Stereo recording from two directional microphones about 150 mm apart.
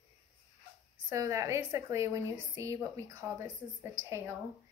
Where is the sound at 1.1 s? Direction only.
20° right (ahead or behind).